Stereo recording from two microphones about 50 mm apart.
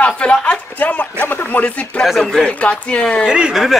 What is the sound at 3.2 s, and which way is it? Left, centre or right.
Speech, centre.